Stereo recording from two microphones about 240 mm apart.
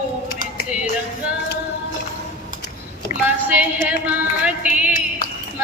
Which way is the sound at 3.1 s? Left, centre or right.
Left.